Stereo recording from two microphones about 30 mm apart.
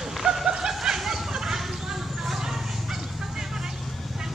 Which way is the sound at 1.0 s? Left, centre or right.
Centre.